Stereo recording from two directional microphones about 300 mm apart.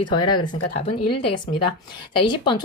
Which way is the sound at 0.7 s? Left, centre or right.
Centre.